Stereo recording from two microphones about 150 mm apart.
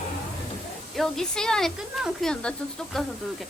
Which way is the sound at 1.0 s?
5° left (ahead or behind).